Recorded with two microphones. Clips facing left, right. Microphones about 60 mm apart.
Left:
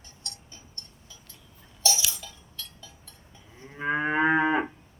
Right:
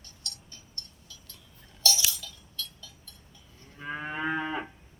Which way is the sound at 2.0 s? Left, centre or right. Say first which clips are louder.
Even; left.